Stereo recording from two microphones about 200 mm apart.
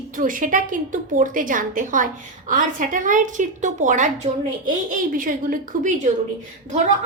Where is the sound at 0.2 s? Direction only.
40° right (ahead or behind).